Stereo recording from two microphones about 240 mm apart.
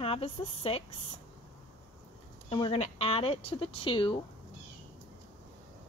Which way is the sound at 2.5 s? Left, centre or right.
Left.